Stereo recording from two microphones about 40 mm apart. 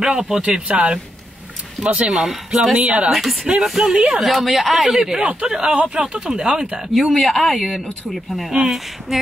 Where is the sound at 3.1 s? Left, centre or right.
Centre.